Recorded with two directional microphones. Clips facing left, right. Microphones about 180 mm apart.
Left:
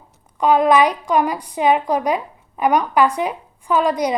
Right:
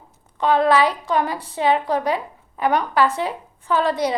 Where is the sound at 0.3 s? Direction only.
15° left (ahead or behind).